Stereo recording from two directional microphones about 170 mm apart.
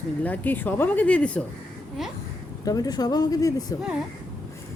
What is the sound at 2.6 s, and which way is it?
Speech, 20° left (ahead or behind).